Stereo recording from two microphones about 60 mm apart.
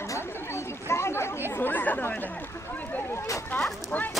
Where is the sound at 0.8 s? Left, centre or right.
Left.